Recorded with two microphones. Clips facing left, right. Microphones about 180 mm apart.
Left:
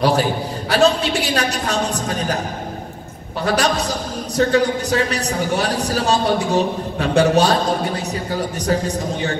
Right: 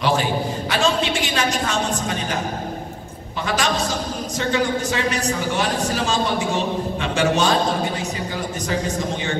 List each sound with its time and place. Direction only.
0.0 s a man's voice: 40° left (ahead or behind)
3.4 s a man's voice: 35° left (ahead or behind)